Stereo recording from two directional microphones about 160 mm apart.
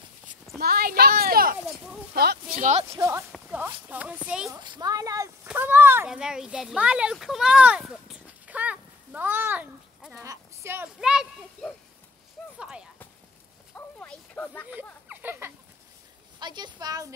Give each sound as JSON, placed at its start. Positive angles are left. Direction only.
{"t": 0.6, "sound": "speech", "side_deg": -75}
{"t": 2.5, "sound": "speech", "side_deg": -50}
{"t": 2.9, "sound": "speech", "side_deg": -15}
{"t": 4.5, "sound": "a woman's voice", "side_deg": -25}
{"t": 10.2, "sound": "a sound", "side_deg": -20}
{"t": 11.0, "sound": "speech", "side_deg": -5}
{"t": 12.5, "sound": "clip-clop", "side_deg": -5}
{"t": 13.7, "sound": "a sound", "side_deg": 10}
{"t": 14.7, "sound": "a sound", "side_deg": -10}
{"t": 16.3, "sound": "a woman's voice", "side_deg": -25}